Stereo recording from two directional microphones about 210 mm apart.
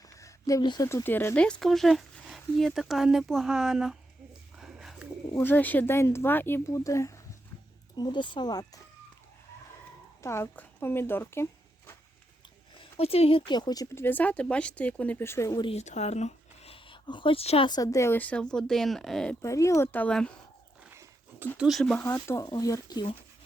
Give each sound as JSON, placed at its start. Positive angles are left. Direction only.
{"t": 0.2, "sound": "speech", "side_deg": 15}
{"t": 4.5, "sound": "bird", "side_deg": 0}
{"t": 5.3, "sound": "speech", "side_deg": 10}
{"t": 10.2, "sound": "speech", "side_deg": 10}
{"t": 12.7, "sound": "speech", "side_deg": 25}
{"t": 19.4, "sound": "speech", "side_deg": 15}
{"t": 20.9, "sound": "dog", "side_deg": -10}
{"t": 21.6, "sound": "speech", "side_deg": 0}
{"t": 22.0, "sound": "speech", "side_deg": 15}